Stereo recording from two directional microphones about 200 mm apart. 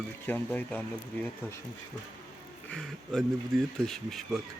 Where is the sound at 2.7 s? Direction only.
Centre (ahead or behind).